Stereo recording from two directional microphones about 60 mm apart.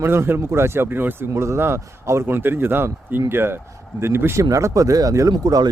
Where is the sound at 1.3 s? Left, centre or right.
Right.